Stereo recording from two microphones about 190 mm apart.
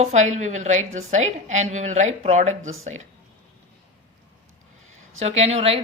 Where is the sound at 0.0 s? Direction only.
35° right (ahead or behind).